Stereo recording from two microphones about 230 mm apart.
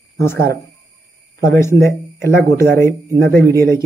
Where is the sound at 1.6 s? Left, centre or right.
Centre.